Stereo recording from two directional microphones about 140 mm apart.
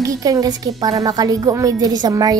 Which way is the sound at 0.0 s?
25° right (ahead or behind).